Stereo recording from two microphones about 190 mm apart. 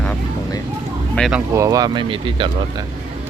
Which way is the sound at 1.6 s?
20° right (ahead or behind).